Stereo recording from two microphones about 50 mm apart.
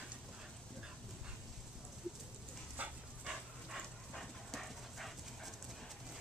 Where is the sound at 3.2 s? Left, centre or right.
Centre.